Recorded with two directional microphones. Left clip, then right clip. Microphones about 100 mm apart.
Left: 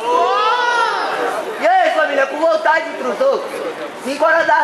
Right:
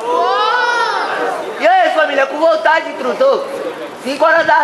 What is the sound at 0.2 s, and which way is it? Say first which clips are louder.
Crowd: right 1 dB; 15° right (ahead or behind).